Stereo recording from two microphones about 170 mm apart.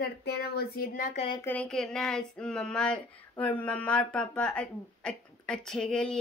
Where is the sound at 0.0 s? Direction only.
75° left (ahead or behind); by 1.1 s 60° left (ahead or behind).